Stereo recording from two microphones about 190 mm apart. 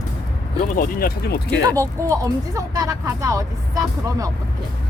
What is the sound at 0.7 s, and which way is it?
Speech, 50° left (ahead or behind).